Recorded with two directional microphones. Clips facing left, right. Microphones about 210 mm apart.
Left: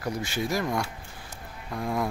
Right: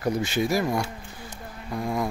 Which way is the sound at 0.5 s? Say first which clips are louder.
Right 3 dB; 5° right (ahead or behind).